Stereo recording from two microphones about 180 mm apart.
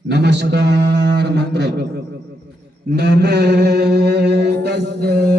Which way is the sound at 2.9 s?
70° right (ahead or behind).